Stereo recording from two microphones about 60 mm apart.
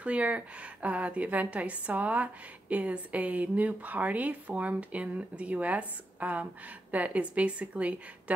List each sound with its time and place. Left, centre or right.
0.0 s a woman's voice: right